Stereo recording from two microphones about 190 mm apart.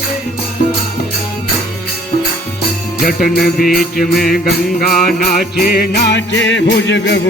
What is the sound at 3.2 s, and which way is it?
Music, 50° left (ahead or behind).